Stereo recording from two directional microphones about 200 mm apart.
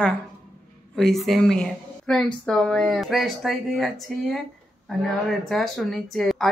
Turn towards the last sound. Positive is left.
turn(degrees=0)  # may be behind; listen again after turning